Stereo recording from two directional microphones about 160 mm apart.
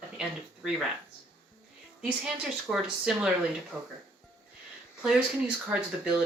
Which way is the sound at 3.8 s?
20° right (ahead or behind).